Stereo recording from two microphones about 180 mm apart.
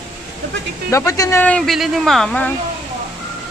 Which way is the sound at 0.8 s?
15° left (ahead or behind).